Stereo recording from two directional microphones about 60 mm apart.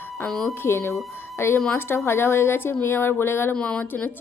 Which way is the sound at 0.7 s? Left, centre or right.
Left.